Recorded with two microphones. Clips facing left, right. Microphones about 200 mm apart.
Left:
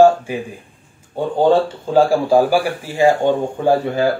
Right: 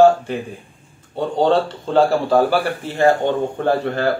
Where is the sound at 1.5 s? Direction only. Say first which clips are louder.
Left 2 dB; 10° left (ahead or behind).